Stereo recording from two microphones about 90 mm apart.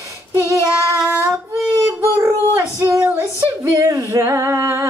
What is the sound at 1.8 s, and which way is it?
Child singing, 35° right (ahead or behind).